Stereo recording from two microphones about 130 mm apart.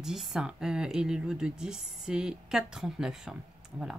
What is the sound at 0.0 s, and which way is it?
Speech, 5° right (ahead or behind).